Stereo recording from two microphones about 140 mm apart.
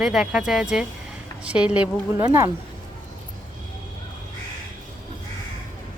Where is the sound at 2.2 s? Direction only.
20° right (ahead or behind).